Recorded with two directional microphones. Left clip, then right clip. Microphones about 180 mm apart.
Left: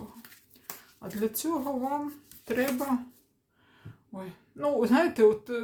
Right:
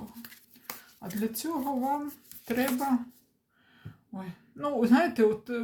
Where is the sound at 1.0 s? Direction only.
15° left (ahead or behind).